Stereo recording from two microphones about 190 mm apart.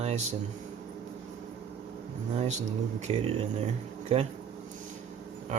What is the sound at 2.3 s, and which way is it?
Speech, 35° right (ahead or behind).